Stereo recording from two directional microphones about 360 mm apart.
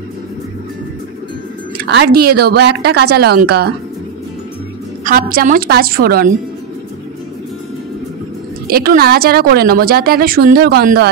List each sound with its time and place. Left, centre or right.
1.8 s speech: right
5.0 s speech: right
8.6 s speech: right